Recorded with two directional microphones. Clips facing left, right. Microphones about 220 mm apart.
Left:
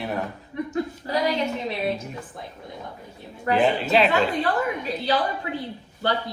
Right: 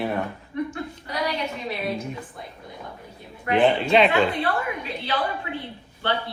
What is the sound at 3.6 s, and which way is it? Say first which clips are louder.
Speech: right 3 dB; 5° left (ahead or behind).